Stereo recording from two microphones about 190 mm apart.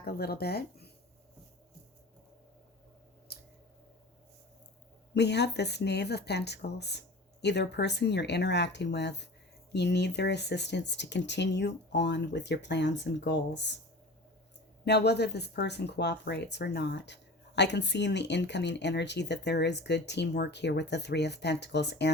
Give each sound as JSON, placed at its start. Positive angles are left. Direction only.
{"t": 0.0, "sound": "speech", "side_deg": 55}
{"t": 5.1, "sound": "speech", "side_deg": 60}
{"t": 14.8, "sound": "speech", "side_deg": 60}